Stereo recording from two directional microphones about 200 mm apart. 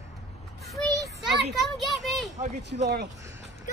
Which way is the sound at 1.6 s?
Centre (ahead or behind).